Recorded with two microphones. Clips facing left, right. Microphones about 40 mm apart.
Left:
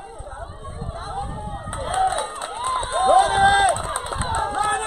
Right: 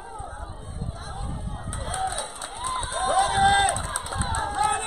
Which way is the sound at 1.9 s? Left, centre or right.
Left.